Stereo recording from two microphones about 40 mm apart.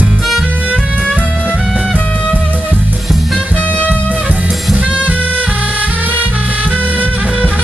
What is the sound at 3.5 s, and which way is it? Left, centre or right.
Music, left.